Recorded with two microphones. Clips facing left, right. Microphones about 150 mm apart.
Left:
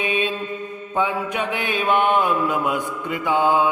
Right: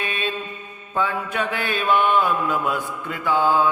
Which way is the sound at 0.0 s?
15° left (ahead or behind).